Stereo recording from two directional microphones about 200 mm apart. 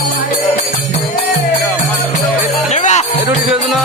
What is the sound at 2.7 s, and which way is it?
Music, 35° left (ahead or behind).